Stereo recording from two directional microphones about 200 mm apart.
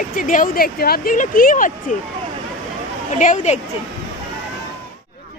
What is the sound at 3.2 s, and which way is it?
Speech, 35° left (ahead or behind).